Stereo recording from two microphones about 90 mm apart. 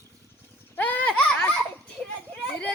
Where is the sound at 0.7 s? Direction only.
15° left (ahead or behind).